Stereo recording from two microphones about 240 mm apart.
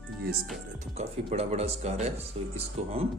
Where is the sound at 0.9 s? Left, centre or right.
Right.